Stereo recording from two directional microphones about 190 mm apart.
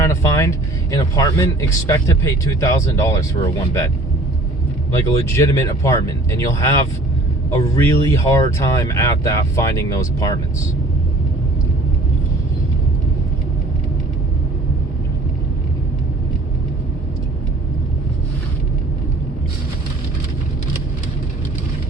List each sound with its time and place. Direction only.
0.0 s speech: 15° left (ahead or behind)
4.9 s speech: 15° left (ahead or behind)